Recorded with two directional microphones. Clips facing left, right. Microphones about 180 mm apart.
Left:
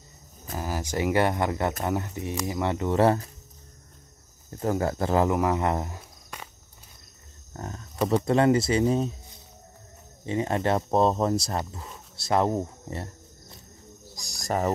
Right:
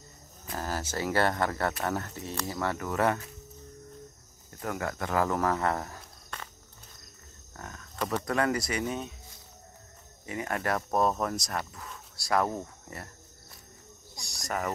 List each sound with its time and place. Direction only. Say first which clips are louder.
0.6 s speech: left 4 dB; 15° left (ahead or behind); by 3.3 s 30° left (ahead or behind)
4.5 s speech: left 8 dB; 30° left (ahead or behind)
5.3 s speech: left 3 dB; 15° left (ahead or behind)
7.5 s a sound: left 7 dB; 30° left (ahead or behind)
8.3 s speech: left 8 dB; 25° left (ahead or behind)
10.2 s speech: left 6 dB; 25° left (ahead or behind)
14.1 s cricket: left 6 dB; 35° left (ahead or behind)